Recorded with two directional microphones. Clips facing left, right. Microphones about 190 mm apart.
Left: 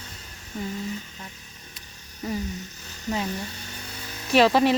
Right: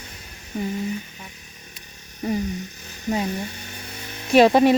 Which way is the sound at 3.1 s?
15° right (ahead or behind).